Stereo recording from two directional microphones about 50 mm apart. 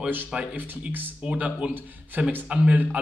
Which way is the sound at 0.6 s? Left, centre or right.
Right.